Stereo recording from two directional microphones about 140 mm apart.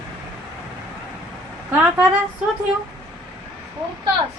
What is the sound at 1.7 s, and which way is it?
Speech, 15° right (ahead or behind).